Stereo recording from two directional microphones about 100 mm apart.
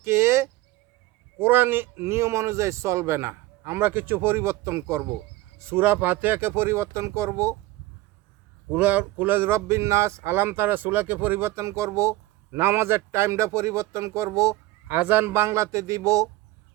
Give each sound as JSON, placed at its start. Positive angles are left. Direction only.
{"t": 0.0, "sound": "a sound", "side_deg": -25}
{"t": 1.4, "sound": "speech", "side_deg": -20}
{"t": 8.7, "sound": "speech", "side_deg": -15}
{"t": 14.8, "sound": "speech", "side_deg": -20}